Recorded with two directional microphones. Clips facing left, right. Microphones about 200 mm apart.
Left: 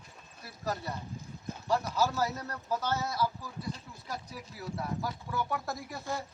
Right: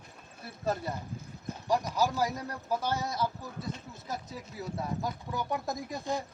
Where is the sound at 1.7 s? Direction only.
15° right (ahead or behind).